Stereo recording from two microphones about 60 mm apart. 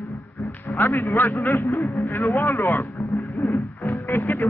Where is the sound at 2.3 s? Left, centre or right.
Left.